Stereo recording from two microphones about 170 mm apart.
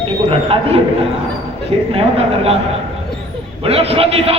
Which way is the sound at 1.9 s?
35° right (ahead or behind).